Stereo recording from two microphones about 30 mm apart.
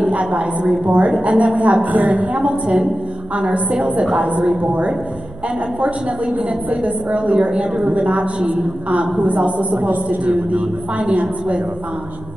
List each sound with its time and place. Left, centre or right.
0.0 s a sound: right
0.4 s a woman's voice: right
1.9 s a woman's voice: right
2.3 s a woman's voice: right
3.5 s a woman's voice: right
9.1 s a woman's voice: right
10.5 s a woman's voice: right